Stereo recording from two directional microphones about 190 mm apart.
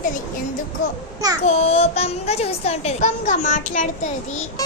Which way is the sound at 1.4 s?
35° left (ahead or behind).